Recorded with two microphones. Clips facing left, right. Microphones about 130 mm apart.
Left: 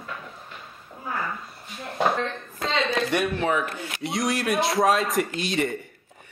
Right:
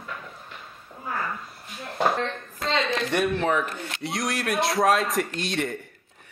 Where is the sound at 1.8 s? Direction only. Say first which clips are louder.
Even; centre (ahead or behind).